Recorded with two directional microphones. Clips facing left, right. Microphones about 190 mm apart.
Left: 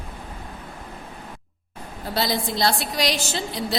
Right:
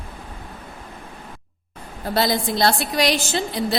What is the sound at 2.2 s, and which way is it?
A woman's voice, 55° right (ahead or behind).